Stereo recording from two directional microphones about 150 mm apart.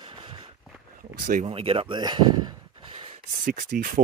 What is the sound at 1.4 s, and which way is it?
Speech, 40° right (ahead or behind).